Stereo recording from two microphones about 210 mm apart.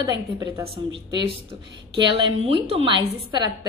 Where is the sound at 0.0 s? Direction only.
15° right (ahead or behind).